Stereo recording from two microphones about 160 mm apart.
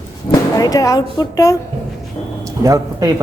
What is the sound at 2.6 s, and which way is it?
Speech, 20° right (ahead or behind).